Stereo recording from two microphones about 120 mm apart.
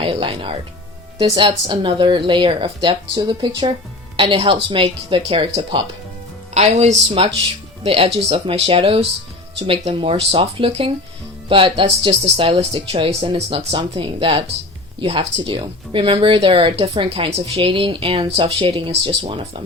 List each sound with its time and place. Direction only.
0.0 s speech: 50° right (ahead or behind)
6.5 s speech: 70° right (ahead or behind)
7.2 s speech: 50° right (ahead or behind)